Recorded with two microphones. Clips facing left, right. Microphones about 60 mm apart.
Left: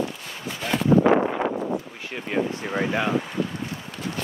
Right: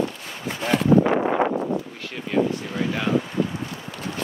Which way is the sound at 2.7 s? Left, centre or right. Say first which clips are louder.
Left 1 dB; left.